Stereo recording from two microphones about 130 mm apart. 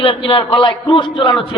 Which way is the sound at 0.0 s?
45° left (ahead or behind).